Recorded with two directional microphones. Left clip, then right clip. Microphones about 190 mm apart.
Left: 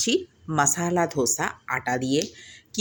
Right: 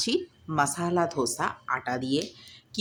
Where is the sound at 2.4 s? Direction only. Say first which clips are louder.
Left 4 dB; 15° left (ahead or behind).